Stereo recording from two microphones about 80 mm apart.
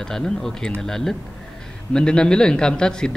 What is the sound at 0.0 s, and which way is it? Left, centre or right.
A man's voice, centre.